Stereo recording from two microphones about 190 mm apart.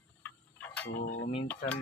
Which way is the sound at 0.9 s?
70° left (ahead or behind).